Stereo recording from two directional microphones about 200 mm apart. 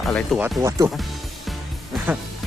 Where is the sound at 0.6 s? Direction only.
15° right (ahead or behind).